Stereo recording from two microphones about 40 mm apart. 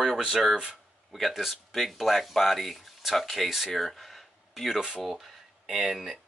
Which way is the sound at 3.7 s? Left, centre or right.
Centre.